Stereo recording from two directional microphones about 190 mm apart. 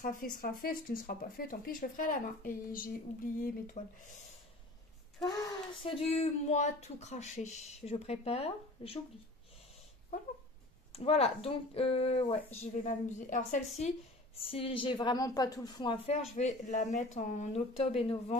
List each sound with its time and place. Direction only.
0.0 s speech: 45° left (ahead or behind)
5.2 s speech: 20° left (ahead or behind)
10.9 s speech: 30° left (ahead or behind)
14.4 s a woman's voice: 30° left (ahead or behind)